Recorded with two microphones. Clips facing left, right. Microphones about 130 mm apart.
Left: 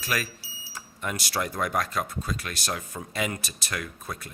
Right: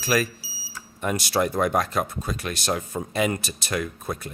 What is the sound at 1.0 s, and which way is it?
Speech, 25° right (ahead or behind).